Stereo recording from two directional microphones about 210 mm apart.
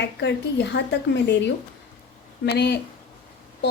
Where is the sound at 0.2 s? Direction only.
55° left (ahead or behind).